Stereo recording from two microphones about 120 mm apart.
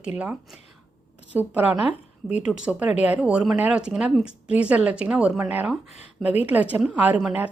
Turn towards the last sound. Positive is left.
turn(degrees=-10)  # may be behind; listen again after turning